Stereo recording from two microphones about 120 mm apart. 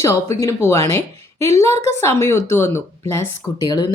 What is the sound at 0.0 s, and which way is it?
Speech, 25° left (ahead or behind).